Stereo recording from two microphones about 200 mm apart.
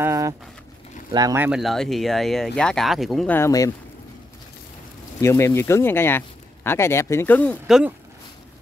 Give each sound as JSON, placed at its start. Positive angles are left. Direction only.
{"t": 0.0, "sound": "a sound", "side_deg": -15}
{"t": 1.1, "sound": "speech", "side_deg": -15}
{"t": 3.3, "sound": "speech", "side_deg": 15}
{"t": 5.2, "sound": "speech", "side_deg": 15}
{"t": 7.6, "sound": "speech", "side_deg": 0}